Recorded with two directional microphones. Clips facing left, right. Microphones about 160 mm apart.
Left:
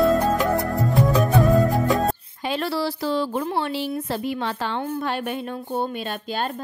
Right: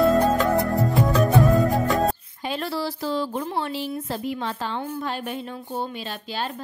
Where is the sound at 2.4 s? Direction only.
80° left; by 5.6 s 60° left (ahead or behind).